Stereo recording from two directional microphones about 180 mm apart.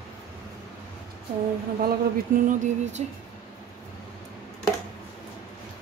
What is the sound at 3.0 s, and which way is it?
Speech, 40° right (ahead or behind).